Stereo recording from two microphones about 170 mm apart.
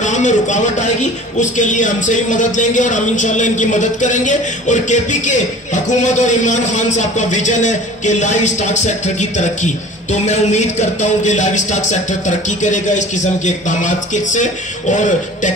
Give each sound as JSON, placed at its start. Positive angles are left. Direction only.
{"t": 0.0, "sound": "a man's voice", "side_deg": 45}